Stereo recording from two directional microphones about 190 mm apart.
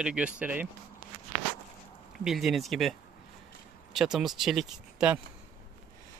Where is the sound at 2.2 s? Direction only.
Centre (ahead or behind).